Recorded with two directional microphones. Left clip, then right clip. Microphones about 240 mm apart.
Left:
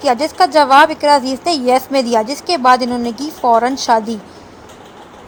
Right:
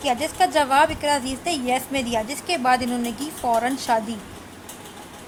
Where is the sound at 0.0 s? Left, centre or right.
Centre.